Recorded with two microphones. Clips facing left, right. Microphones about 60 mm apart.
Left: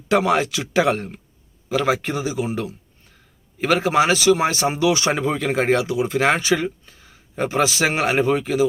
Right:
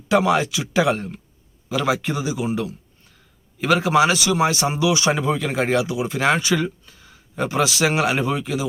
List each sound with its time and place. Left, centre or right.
0.1 s speech: left